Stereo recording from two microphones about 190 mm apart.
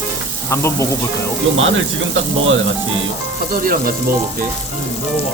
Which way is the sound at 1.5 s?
90° right.